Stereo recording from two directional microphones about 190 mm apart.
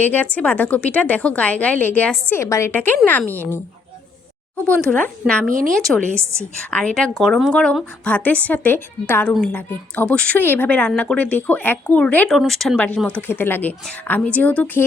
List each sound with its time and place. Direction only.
0.0 s a woman's voice: 10° left (ahead or behind)
4.6 s a woman's voice: 5° left (ahead or behind)
5.5 s a woman's voice: 45° right (ahead or behind)
6.7 s a woman's voice: 5° left (ahead or behind)